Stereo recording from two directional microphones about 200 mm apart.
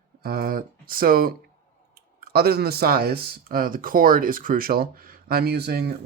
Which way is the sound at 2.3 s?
50° right (ahead or behind).